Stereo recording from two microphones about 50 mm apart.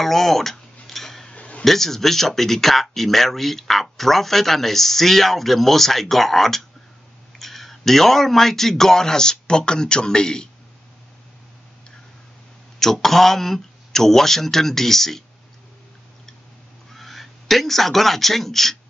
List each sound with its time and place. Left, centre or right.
0.0 s tick-tock: centre
1.3 s a sound: left
1.6 s speech: centre
12.7 s speech: centre
16.9 s speech: centre